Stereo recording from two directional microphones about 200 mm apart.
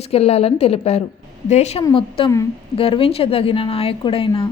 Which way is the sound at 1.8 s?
25° left (ahead or behind).